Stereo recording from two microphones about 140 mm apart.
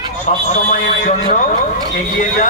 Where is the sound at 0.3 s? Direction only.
65° left (ahead or behind).